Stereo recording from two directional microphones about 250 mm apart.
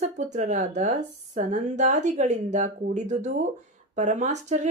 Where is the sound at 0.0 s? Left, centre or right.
Right.